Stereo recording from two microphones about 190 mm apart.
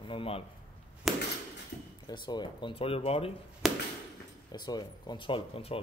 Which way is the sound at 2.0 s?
20° left (ahead or behind).